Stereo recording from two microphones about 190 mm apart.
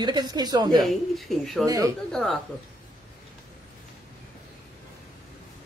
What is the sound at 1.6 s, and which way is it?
Speech, 20° right (ahead or behind).